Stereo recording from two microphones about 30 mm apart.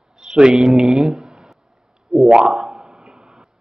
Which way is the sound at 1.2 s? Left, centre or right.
Right.